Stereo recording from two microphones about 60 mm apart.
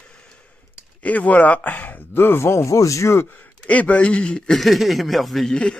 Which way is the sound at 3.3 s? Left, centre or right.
Left.